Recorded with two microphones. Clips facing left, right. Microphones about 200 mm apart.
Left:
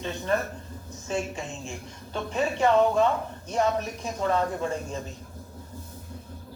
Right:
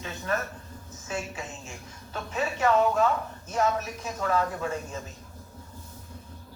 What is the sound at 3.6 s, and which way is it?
Speech, 40° left (ahead or behind).